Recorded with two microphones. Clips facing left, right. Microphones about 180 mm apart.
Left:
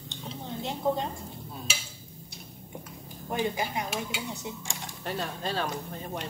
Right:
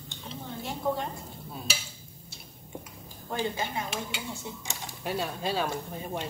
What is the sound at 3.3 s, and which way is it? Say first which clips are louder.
Speech: left 2 dB; 15° left (ahead or behind).